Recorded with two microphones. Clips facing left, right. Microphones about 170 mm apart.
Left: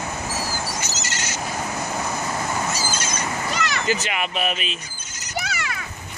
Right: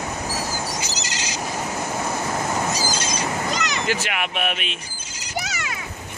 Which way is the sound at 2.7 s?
15° right (ahead or behind).